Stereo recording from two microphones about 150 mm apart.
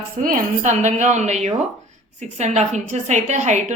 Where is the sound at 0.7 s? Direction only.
50° right (ahead or behind).